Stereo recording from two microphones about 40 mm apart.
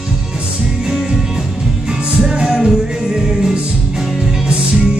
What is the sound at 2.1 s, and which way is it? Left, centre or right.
Music, centre.